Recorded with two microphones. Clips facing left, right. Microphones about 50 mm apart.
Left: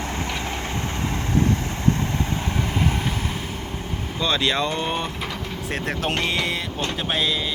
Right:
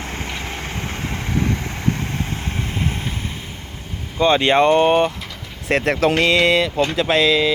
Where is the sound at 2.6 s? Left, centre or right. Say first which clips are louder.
Left 1 dB; right.